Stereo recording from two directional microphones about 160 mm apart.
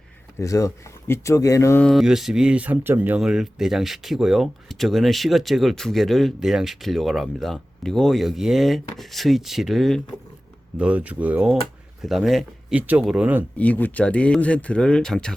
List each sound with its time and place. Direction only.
0.3 s speech: 20° left (ahead or behind)
1.8 s speech: centre (ahead or behind)
13.6 s speech: 10° left (ahead or behind)